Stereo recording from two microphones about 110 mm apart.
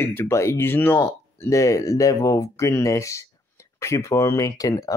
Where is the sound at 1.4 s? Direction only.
30° left (ahead or behind).